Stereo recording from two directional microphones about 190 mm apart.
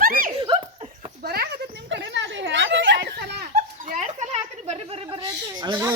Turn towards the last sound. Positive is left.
turn(degrees=-20)  # may be behind; listen again after turning